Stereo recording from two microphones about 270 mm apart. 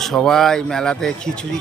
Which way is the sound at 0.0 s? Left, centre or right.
Centre.